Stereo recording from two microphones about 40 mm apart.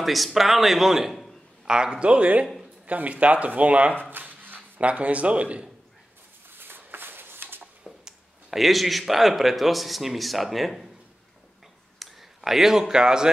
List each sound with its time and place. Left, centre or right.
0.0 s speech: centre
1.7 s speech: centre; by 3.9 s right
4.0 s a sound: right
4.7 s speech: right
6.6 s a sound: right
8.5 s speech: centre
12.0 s speech: centre